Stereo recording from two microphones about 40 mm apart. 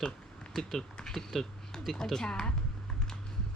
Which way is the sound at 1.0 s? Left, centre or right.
Centre.